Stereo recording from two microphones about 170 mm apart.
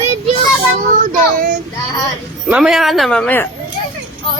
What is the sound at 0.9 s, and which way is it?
Child singing, 50° right (ahead or behind).